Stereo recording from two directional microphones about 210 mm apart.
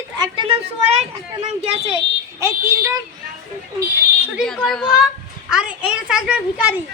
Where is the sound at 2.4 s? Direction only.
15° right (ahead or behind).